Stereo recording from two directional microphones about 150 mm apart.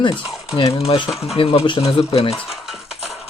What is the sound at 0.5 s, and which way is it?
Speech, 40° left (ahead or behind).